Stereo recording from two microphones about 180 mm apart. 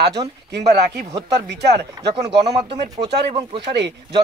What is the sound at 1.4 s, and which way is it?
Speech, 70° right (ahead or behind).